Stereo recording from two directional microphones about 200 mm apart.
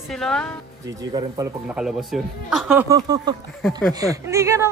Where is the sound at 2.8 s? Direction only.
20° right (ahead or behind).